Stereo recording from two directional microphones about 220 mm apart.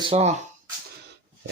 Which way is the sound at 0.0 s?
25° right (ahead or behind).